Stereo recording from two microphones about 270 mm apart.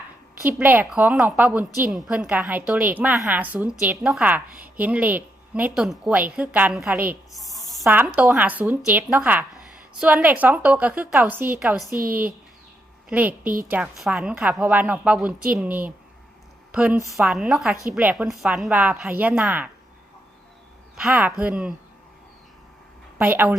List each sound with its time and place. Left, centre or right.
0.4 s a woman's voice: centre
13.1 s a woman's voice: centre
13.4 s a woman's voice: right
13.7 s a woman's voice: centre
20.9 s a woman's voice: centre
23.1 s a woman's voice: centre